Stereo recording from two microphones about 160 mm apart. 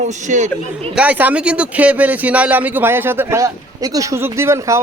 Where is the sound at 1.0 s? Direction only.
10° right (ahead or behind).